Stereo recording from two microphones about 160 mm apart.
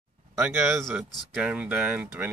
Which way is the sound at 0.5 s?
15° right (ahead or behind).